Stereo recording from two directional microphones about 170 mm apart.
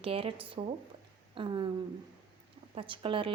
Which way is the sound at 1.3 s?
30° right (ahead or behind).